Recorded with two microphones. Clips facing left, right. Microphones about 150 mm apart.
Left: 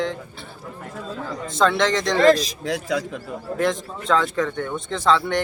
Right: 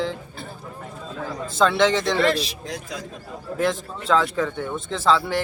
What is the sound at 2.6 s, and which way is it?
Speech, 70° left (ahead or behind).